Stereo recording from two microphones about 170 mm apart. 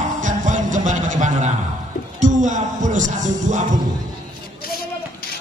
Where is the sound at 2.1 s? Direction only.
45° right (ahead or behind).